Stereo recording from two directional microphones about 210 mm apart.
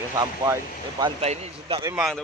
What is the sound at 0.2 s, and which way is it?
Speech, 15° right (ahead or behind).